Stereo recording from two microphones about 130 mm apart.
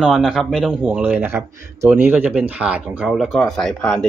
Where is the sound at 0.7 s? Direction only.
15° right (ahead or behind).